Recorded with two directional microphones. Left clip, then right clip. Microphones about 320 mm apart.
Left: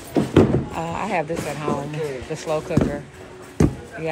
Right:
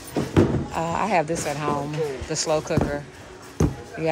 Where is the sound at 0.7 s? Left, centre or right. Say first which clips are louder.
Right 2 dB; centre.